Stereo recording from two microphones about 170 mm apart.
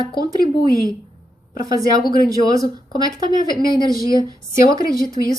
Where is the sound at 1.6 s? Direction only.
20° right (ahead or behind).